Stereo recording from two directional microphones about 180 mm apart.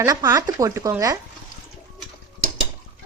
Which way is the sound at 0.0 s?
15° right (ahead or behind).